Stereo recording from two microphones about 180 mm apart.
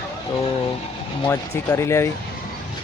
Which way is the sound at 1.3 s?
15° left (ahead or behind).